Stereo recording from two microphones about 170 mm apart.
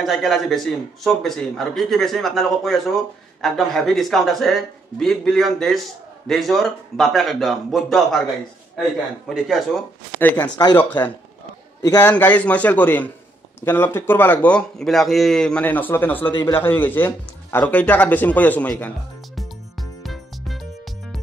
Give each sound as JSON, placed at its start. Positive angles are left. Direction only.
{"t": 0.0, "sound": "a man's voice", "side_deg": 0}
{"t": 9.3, "sound": "a man's voice", "side_deg": 0}
{"t": 10.8, "sound": "speech", "side_deg": 10}
{"t": 16.3, "sound": "a man's voice", "side_deg": 25}
{"t": 16.6, "sound": "speech", "side_deg": 10}
{"t": 20.0, "sound": "music", "side_deg": 0}